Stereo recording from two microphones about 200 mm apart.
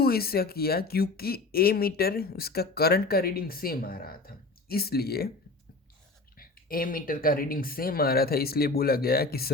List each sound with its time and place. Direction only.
0.0 s speech: 50° left (ahead or behind)
6.3 s speech: 45° left (ahead or behind)